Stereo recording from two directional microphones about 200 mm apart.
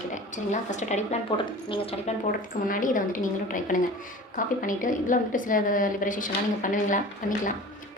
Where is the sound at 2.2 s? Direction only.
40° left (ahead or behind).